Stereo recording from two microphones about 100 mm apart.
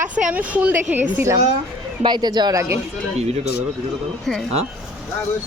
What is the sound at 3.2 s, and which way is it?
Speech, 90° right.